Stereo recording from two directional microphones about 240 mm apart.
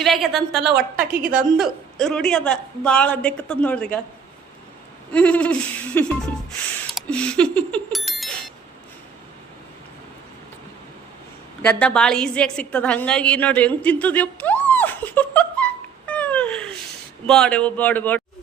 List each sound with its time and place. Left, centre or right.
0.0 s a woman's voice: centre
1.2 s a woman's voice: right
1.5 s a woman's voice: centre
5.1 s a woman's voice: centre
6.9 s bicycle bell: centre
11.6 s a woman's voice: centre